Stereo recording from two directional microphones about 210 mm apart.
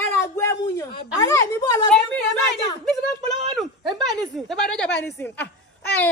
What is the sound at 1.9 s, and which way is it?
Speech, 5° left (ahead or behind).